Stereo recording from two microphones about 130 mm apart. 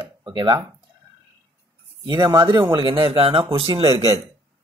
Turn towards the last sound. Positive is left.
turn(degrees=-50)  # may be behind; listen again after turning